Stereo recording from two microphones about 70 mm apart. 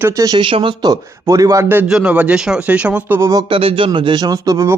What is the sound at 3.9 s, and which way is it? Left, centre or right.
Speech, right.